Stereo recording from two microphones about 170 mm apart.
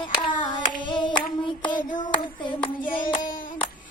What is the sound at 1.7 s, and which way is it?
Child singing, 25° left (ahead or behind).